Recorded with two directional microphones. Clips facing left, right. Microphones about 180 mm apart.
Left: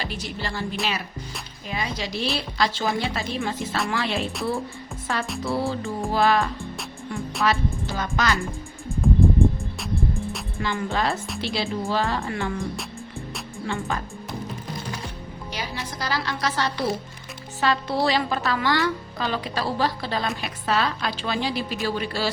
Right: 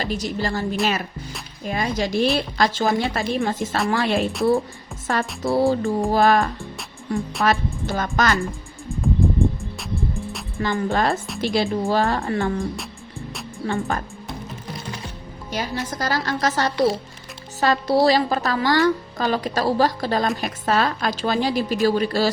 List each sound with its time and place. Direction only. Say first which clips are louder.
0.0 s a woman's voice: right 7 dB; 40° right (ahead or behind)
5.4 s a woman's voice: right 9 dB; 40° right (ahead or behind)
9.0 s music: left 1 dB; centre (ahead or behind)
10.6 s a woman's voice: right 4 dB; 45° right (ahead or behind)
13.7 s a woman's voice: right 5 dB; 35° right (ahead or behind)
15.5 s a woman's voice: right 7 dB; 45° right (ahead or behind)